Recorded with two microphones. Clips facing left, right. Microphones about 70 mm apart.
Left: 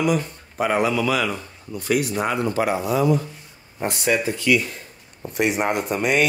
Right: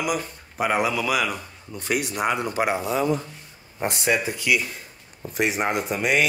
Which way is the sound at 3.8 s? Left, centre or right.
Centre.